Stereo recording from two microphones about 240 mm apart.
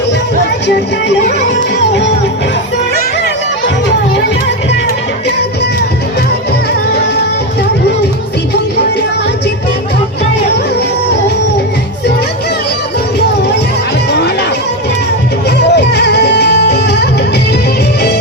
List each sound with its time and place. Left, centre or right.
15.4 s music: left